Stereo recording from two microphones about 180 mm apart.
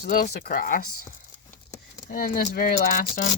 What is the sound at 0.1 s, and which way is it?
Speech, 50° left (ahead or behind).